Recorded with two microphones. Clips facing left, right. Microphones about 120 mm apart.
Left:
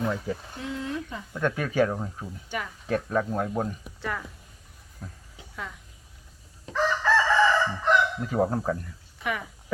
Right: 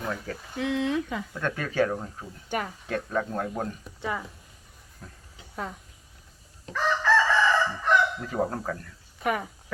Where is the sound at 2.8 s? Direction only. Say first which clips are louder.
Left 3 dB; 5° left (ahead or behind).